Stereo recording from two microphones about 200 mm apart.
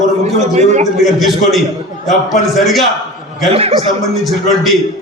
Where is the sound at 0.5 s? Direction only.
35° right (ahead or behind).